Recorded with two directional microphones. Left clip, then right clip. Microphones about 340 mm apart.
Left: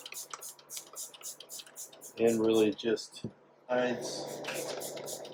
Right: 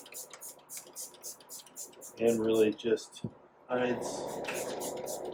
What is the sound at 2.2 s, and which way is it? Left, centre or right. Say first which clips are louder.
Speech: even; left.